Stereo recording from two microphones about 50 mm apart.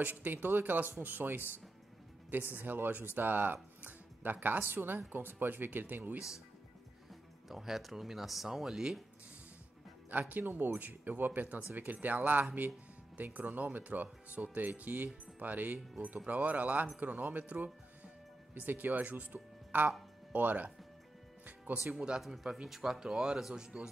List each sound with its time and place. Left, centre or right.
0.0 s speech: right
2.5 s speech: right
7.1 s speech: centre
10.0 s speech: right
21.5 s music: right
21.9 s speech: centre